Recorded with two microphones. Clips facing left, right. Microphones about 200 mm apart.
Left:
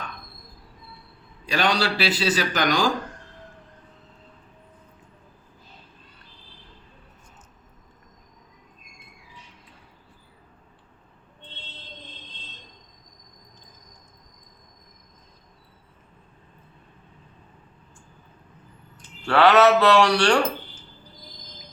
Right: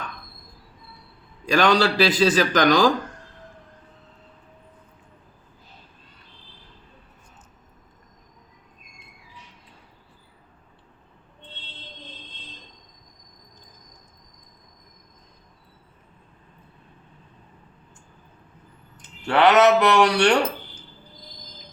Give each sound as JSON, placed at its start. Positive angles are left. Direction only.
{"t": 1.5, "sound": "a man's voice", "side_deg": -45}
{"t": 19.2, "sound": "speech", "side_deg": -20}